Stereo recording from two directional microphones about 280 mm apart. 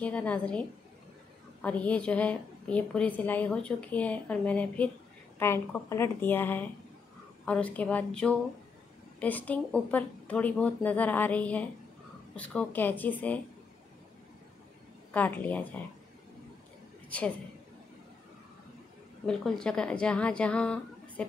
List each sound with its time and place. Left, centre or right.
0.0 s a woman's voice: centre
15.1 s a woman's voice: centre
19.2 s a woman's voice: centre